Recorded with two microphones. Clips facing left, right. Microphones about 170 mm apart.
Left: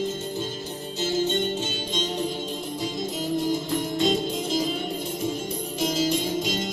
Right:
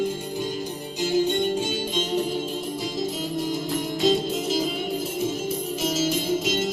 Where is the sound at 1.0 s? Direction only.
15° right (ahead or behind).